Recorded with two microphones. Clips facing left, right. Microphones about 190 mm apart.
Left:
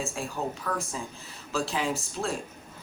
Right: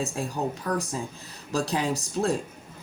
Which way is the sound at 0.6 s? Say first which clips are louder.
Right 4 dB; 40° right (ahead or behind).